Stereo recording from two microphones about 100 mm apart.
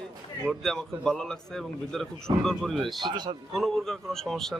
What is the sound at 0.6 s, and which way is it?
A man's voice, 5° left (ahead or behind).